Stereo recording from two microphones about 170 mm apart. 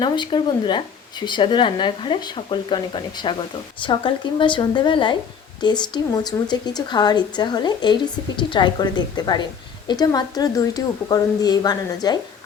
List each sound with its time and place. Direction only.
0.0 s a woman's voice: 25° left (ahead or behind)